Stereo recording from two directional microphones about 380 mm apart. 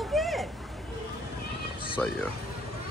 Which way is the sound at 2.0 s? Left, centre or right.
Centre.